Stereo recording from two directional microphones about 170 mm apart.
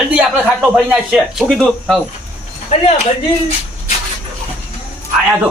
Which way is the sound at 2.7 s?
40° left (ahead or behind).